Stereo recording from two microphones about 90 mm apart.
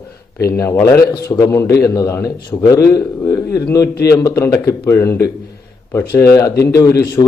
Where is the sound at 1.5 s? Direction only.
35° left (ahead or behind).